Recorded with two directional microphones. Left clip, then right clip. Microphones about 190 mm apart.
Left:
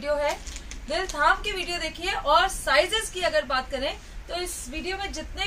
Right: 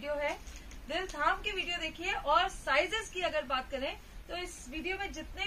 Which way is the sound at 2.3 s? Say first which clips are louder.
Left 8 dB; 15° left (ahead or behind).